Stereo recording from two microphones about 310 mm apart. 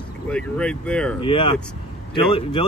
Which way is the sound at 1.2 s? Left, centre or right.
Centre.